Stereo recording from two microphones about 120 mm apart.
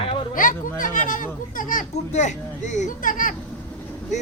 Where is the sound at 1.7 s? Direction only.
75° left (ahead or behind); by 3.3 s 90° left.